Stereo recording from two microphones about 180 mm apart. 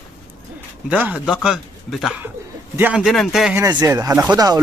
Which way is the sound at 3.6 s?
20° right (ahead or behind).